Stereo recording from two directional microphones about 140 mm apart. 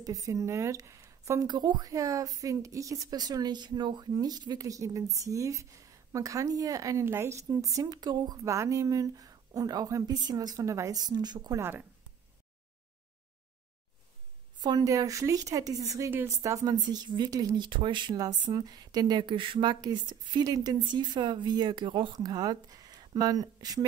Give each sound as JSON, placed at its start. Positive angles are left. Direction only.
{"t": 0.0, "sound": "speech", "side_deg": -25}
{"t": 14.6, "sound": "speech", "side_deg": -25}